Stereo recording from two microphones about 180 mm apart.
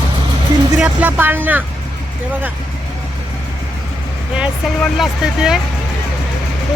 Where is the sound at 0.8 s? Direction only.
10° right (ahead or behind).